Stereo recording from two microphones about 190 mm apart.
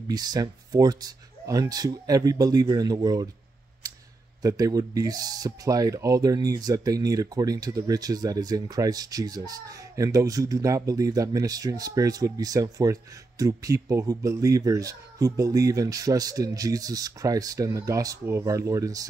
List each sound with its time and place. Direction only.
0.1 s speech: 20° right (ahead or behind)
4.4 s speech: 20° right (ahead or behind)